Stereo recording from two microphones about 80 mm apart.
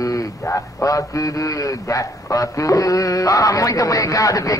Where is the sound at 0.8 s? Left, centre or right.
Left.